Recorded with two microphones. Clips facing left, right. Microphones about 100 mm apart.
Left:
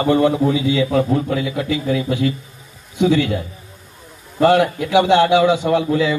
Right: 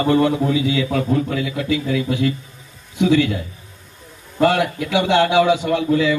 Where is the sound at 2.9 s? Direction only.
20° left (ahead or behind).